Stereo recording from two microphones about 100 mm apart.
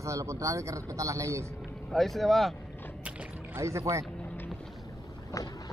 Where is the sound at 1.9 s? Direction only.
Centre (ahead or behind).